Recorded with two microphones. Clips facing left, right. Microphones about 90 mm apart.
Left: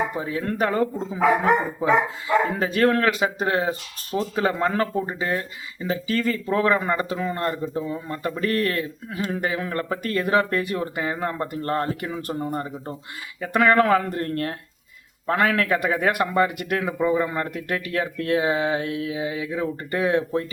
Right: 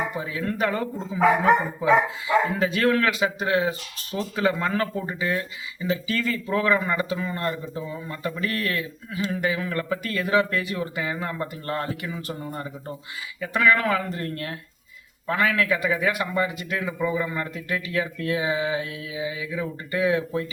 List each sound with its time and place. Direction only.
0.2 s speech: 40° left (ahead or behind)